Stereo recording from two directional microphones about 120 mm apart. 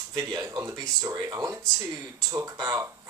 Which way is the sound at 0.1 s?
25° right (ahead or behind).